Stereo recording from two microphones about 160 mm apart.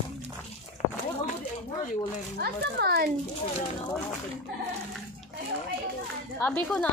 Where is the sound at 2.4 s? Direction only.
90° right.